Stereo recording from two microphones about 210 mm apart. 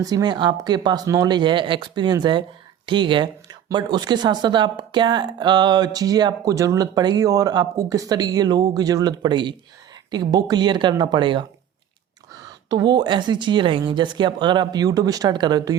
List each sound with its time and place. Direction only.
0.0 s speech: 20° right (ahead or behind)
12.6 s speech: 20° right (ahead or behind)